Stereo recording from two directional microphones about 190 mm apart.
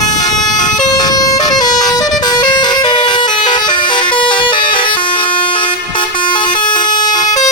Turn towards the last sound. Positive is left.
turn(degrees=20)  # may be behind; listen again after turning